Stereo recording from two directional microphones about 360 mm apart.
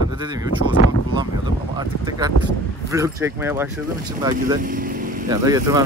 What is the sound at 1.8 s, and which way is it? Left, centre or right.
Speech, centre.